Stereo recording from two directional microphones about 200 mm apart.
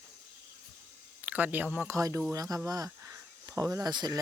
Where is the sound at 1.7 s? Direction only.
10° right (ahead or behind).